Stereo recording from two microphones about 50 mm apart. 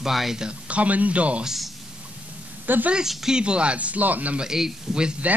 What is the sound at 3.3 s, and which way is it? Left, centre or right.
Speech, centre.